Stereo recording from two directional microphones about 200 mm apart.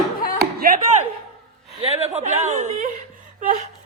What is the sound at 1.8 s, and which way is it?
Speech, 30° right (ahead or behind).